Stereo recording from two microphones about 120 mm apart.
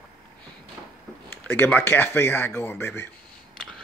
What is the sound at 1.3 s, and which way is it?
Speech, 15° left (ahead or behind).